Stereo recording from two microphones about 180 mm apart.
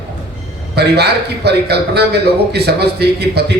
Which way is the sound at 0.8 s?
65° right (ahead or behind).